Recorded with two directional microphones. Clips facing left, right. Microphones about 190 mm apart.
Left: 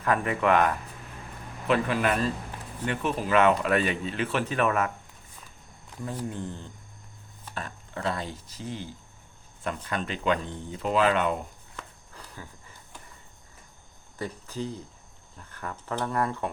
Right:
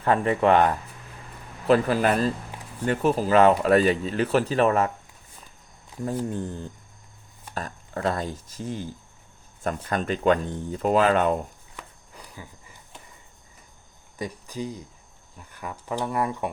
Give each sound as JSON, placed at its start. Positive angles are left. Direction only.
{"t": 0.0, "sound": "speech", "side_deg": -30}
{"t": 6.1, "sound": "speech", "side_deg": -45}
{"t": 11.8, "sound": "a sound", "side_deg": -10}
{"t": 14.2, "sound": "speech", "side_deg": -15}